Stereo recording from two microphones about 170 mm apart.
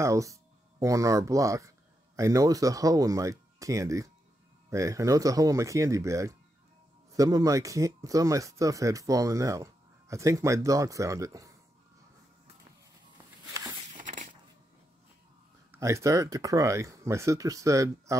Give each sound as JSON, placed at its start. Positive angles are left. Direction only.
{"t": 0.0, "sound": "speech", "side_deg": -20}
{"t": 13.9, "sound": "a sound", "side_deg": -45}
{"t": 15.7, "sound": "speech", "side_deg": -15}